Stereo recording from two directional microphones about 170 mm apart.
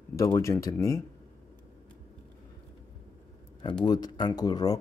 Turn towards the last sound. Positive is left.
turn(degrees=20)  # may be behind; listen again after turning